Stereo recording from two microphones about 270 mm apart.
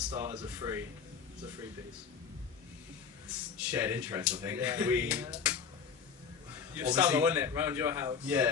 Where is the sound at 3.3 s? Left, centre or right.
Centre.